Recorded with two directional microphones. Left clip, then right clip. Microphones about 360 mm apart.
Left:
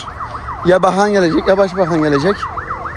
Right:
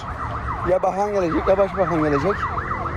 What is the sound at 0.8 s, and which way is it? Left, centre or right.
Speech, left.